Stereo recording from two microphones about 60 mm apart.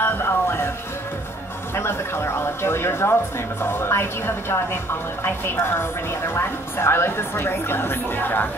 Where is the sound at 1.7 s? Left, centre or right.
Left.